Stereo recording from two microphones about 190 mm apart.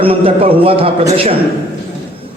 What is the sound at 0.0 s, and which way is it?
A man's voice, 30° right (ahead or behind).